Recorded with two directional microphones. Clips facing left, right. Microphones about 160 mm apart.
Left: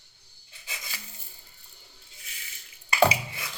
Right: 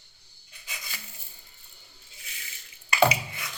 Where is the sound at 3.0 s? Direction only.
30° left (ahead or behind).